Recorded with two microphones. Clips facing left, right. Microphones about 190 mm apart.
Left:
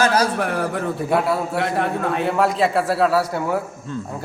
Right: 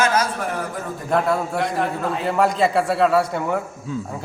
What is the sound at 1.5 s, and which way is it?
Speech, 65° left (ahead or behind).